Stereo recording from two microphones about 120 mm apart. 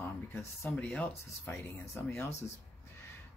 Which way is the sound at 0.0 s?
20° left (ahead or behind).